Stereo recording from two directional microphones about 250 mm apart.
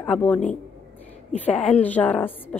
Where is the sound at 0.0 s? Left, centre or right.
Centre.